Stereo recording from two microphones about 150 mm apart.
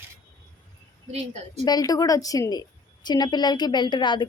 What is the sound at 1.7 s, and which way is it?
A woman's voice, 25° left (ahead or behind).